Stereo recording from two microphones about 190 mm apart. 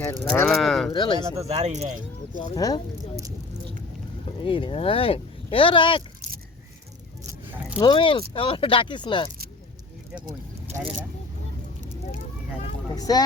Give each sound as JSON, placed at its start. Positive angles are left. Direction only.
{"t": 0.0, "sound": "speech", "side_deg": 10}
{"t": 0.9, "sound": "speech", "side_deg": 25}
{"t": 1.5, "sound": "speech", "side_deg": -35}
{"t": 2.6, "sound": "speech", "side_deg": 20}
{"t": 4.3, "sound": "speech", "side_deg": 30}
{"t": 7.8, "sound": "speech", "side_deg": 25}
{"t": 10.2, "sound": "speech", "side_deg": -25}
{"t": 12.9, "sound": "speech", "side_deg": 20}